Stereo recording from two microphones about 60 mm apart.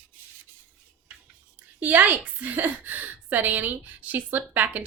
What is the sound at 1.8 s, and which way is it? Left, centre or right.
A woman's voice, right.